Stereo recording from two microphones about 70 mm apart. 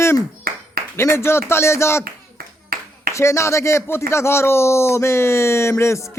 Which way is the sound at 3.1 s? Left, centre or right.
Left.